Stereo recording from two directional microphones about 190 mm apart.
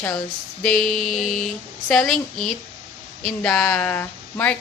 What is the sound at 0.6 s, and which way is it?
A woman's voice, centre (ahead or behind).